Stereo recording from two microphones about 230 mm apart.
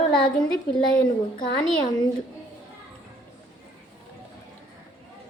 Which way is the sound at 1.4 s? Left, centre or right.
Centre.